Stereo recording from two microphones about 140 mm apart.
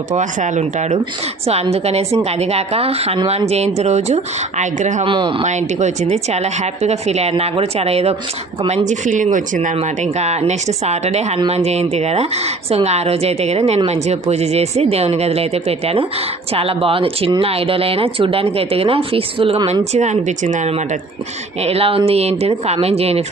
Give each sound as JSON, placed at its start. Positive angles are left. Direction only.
{"t": 0.1, "sound": "a woman's voice", "side_deg": -60}
{"t": 5.0, "sound": "speech", "side_deg": -35}
{"t": 5.5, "sound": "a woman's voice", "side_deg": -55}
{"t": 19.8, "sound": "a woman's voice", "side_deg": -55}